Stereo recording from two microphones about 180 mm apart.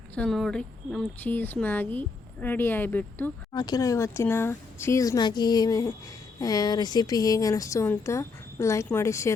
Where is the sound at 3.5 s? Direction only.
20° left (ahead or behind).